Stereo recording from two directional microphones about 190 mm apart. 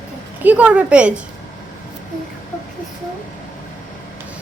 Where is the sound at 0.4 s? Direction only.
5° right (ahead or behind).